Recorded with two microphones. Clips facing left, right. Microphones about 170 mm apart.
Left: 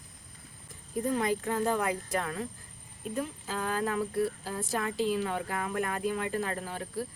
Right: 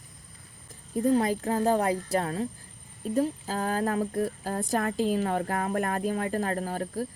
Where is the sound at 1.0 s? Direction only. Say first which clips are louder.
Right 5 dB; 35° right (ahead or behind).